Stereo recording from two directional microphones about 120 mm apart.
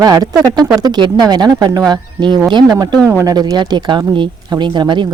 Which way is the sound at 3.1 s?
25° right (ahead or behind).